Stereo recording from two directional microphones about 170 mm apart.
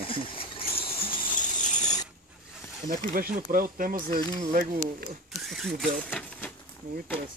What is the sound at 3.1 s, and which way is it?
Speech, 55° right (ahead or behind).